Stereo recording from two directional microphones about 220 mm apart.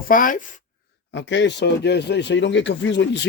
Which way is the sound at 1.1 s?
55° left (ahead or behind).